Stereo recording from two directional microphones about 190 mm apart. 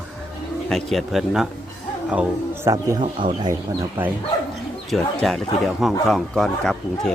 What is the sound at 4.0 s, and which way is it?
Speech, 10° right (ahead or behind).